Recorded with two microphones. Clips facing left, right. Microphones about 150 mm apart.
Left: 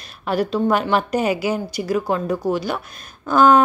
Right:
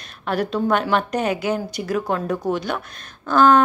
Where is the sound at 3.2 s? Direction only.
10° left (ahead or behind).